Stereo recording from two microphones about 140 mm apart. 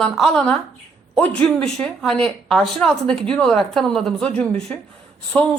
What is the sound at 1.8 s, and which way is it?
Speech, 5° left (ahead or behind).